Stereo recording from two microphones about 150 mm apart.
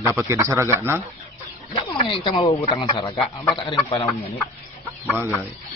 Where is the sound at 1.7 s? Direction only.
35° left (ahead or behind).